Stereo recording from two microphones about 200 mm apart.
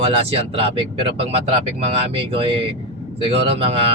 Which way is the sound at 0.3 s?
30° right (ahead or behind).